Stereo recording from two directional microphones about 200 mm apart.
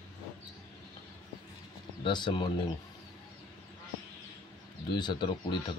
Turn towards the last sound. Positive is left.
turn(degrees=25)  # may be behind; listen again after turning